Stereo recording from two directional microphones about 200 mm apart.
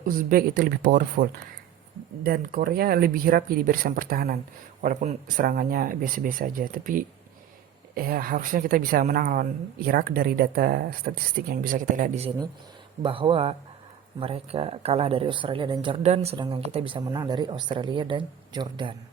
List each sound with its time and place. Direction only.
0.0 s a woman's voice: 45° right (ahead or behind)
13.0 s speech: 25° right (ahead or behind)